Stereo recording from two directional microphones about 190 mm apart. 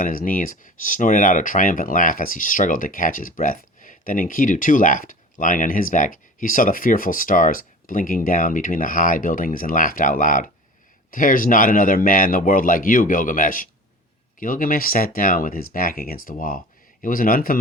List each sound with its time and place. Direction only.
0.0 s speech: 50° left (ahead or behind)